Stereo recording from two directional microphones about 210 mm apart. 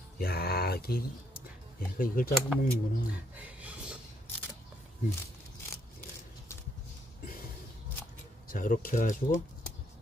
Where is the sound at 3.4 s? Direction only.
5° right (ahead or behind).